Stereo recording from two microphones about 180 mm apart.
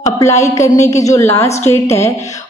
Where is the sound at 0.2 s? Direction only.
15° left (ahead or behind).